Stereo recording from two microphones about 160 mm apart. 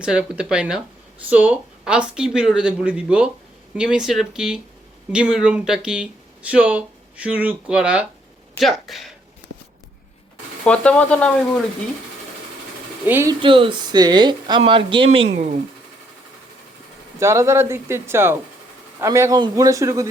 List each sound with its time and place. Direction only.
0.0 s speech: 5° right (ahead or behind)
10.6 s speech: 5° left (ahead or behind)
13.1 s speech: 15° right (ahead or behind)
13.4 s speech: 30° right (ahead or behind)
15.4 s speech: 50° right (ahead or behind)
17.2 s speech: 20° right (ahead or behind)